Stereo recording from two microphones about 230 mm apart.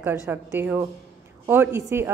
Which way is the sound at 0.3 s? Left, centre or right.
Centre.